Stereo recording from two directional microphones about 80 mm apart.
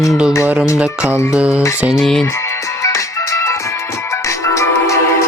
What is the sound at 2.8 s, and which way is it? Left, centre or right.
Music, left.